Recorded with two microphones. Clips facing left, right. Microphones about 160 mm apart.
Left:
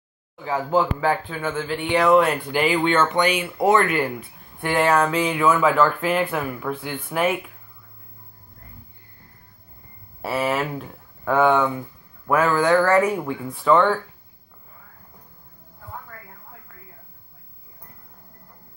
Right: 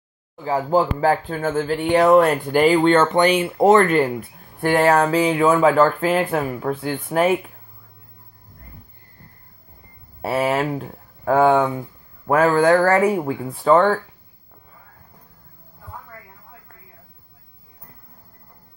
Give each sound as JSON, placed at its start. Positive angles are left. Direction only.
{"t": 0.4, "sound": "speech", "side_deg": -35}
{"t": 10.2, "sound": "speech", "side_deg": -30}